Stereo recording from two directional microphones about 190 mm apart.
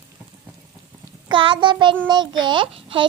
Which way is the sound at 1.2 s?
25° right (ahead or behind).